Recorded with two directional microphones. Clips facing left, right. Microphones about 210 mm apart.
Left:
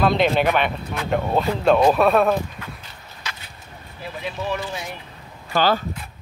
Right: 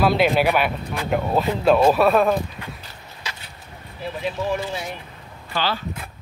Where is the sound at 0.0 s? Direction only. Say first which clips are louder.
Even; 5° right (ahead or behind).